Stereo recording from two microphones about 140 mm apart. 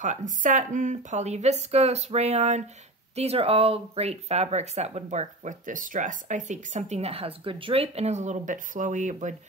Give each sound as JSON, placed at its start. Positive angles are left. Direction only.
{"t": 0.0, "sound": "speech", "side_deg": -65}